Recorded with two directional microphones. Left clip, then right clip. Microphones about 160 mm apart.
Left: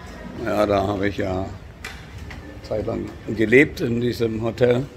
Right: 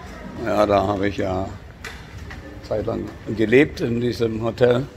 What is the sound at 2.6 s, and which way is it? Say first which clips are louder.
Speech: right 1 dB; 10° left (ahead or behind).